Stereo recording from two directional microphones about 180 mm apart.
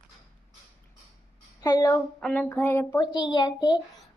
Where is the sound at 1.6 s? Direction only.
20° left (ahead or behind).